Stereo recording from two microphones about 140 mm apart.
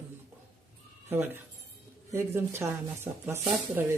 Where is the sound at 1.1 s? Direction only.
15° right (ahead or behind).